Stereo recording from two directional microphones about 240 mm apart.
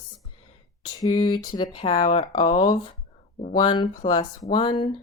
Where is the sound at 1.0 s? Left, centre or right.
Centre.